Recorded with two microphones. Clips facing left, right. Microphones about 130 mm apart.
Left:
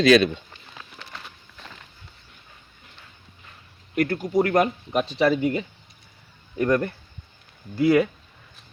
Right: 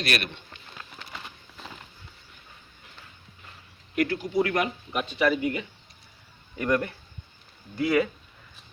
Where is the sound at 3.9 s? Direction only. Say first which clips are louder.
Left 3 dB; 45° left (ahead or behind); by 5.6 s 30° left (ahead or behind).